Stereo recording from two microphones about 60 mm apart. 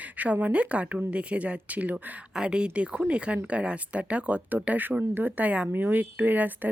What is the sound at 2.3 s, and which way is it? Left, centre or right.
Speech, centre.